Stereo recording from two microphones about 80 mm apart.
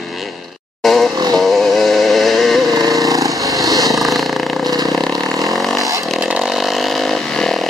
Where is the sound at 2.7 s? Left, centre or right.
Right.